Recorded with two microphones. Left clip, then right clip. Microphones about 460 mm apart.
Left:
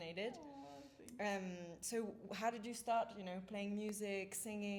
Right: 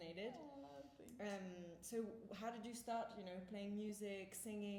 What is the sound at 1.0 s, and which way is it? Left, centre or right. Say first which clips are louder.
A woman's voice: left 8 dB; left.